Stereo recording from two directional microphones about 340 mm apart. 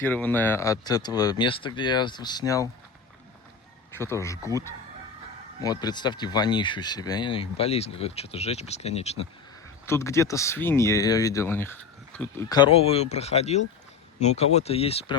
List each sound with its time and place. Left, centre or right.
0.0 s speech: centre
3.9 s speech: centre
9.8 s speech: centre